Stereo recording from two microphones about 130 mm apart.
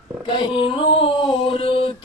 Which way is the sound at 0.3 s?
40° left (ahead or behind).